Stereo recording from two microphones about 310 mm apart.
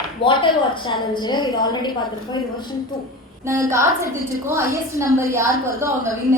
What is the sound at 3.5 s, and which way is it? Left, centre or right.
Speech, centre.